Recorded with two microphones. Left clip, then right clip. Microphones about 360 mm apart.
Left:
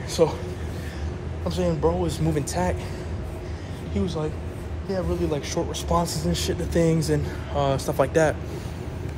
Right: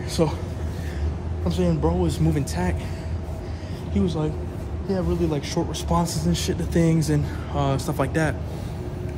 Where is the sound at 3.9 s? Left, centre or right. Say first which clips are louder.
Right 2 dB; centre.